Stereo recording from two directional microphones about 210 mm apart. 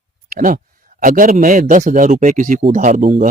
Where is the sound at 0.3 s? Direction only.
40° right (ahead or behind).